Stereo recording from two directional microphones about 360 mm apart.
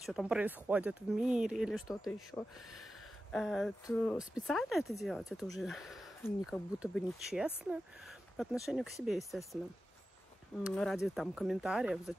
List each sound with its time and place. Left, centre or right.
0.0 s speech: centre
10.6 s speech: centre